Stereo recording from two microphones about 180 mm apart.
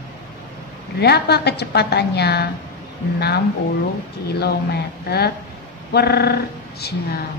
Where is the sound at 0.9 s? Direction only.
65° left (ahead or behind).